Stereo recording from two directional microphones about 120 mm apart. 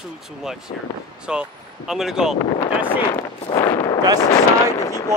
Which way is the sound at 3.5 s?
35° left (ahead or behind).